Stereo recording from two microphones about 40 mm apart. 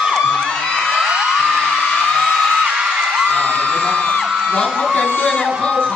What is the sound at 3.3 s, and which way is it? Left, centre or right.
Whoop, left.